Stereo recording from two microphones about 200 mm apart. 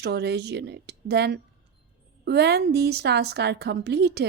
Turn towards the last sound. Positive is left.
turn(degrees=-55)  # may be behind; listen again after turning